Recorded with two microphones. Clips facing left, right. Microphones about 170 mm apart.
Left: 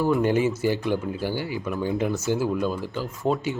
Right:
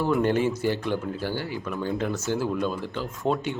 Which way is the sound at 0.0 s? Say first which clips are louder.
Left 1 dB; 5° left (ahead or behind).